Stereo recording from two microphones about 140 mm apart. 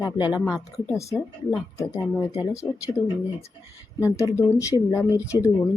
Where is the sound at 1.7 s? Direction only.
20° left (ahead or behind).